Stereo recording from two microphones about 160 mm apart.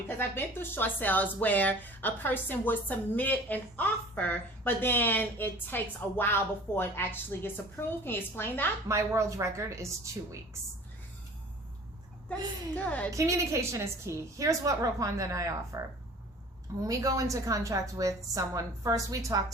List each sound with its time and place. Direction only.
0.2 s speech: 15° left (ahead or behind)
8.9 s a woman's voice: 20° right (ahead or behind)
12.8 s speech: 10° left (ahead or behind)
13.1 s a woman's voice: 20° right (ahead or behind)
16.8 s a woman's voice: 20° right (ahead or behind)